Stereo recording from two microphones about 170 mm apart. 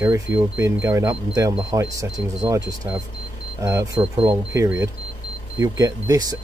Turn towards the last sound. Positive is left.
turn(degrees=-20)  # may be behind; listen again after turning